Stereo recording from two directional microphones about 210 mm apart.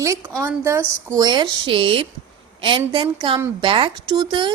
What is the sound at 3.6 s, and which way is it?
Speech, 25° right (ahead or behind).